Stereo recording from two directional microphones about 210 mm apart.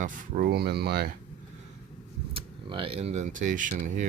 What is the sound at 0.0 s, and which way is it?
Speech, 40° right (ahead or behind).